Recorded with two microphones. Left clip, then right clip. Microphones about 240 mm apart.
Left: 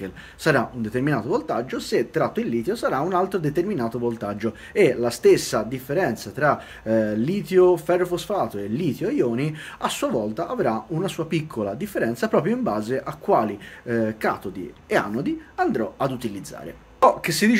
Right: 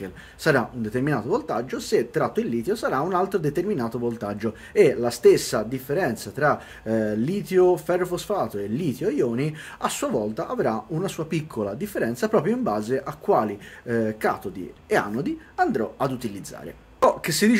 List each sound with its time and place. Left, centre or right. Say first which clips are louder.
0.0 s speech: left 1 dB; centre